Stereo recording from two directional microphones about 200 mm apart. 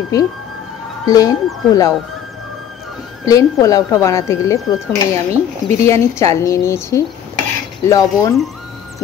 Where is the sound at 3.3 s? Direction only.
15° left (ahead or behind).